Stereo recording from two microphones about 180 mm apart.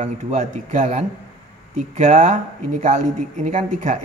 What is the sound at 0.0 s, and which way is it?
A man's voice, 40° right (ahead or behind).